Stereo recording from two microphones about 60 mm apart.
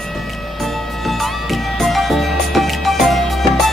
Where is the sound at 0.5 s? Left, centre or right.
Centre.